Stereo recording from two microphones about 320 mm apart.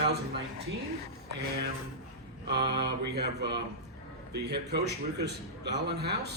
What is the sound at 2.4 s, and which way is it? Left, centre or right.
A man's voice, right.